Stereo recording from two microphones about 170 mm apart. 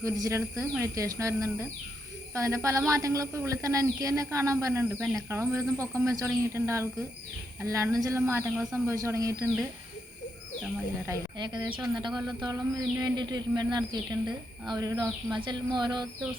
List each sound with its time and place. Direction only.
0.0 s a woman's voice: 20° right (ahead or behind)
11.0 s speech: 20° right (ahead or behind)